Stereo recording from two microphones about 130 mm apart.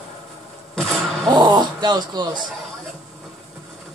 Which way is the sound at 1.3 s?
35° right (ahead or behind).